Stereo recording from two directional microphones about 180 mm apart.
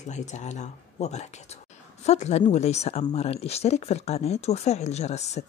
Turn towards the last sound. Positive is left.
turn(degrees=40)  # may be behind; listen again after turning